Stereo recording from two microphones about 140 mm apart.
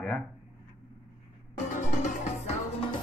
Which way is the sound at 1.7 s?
65° left (ahead or behind).